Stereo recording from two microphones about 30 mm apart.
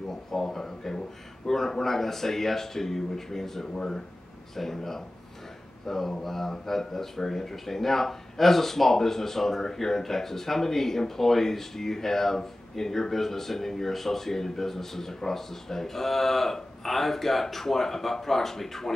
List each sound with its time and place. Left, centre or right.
0.3 s speech: centre
3.7 s speech: left
4.6 s speech: centre